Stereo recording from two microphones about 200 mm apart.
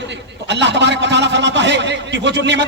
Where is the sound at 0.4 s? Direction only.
60° right (ahead or behind).